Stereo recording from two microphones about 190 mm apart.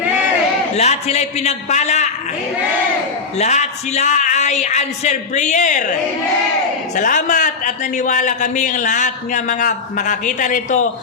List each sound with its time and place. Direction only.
0.8 s a man's voice: 35° left (ahead or behind)
3.3 s a man's voice: 35° left (ahead or behind)
6.9 s a man's voice: 40° left (ahead or behind)